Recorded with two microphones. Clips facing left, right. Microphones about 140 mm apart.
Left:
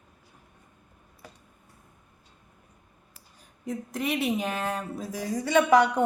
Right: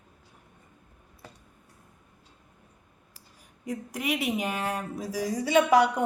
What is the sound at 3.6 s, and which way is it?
Speech, 10° right (ahead or behind).